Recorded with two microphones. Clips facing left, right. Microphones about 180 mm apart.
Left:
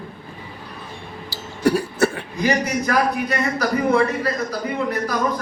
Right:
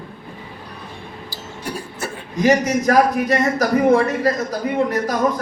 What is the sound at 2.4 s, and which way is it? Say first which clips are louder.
A man's voice: right 5 dB; 45° right (ahead or behind).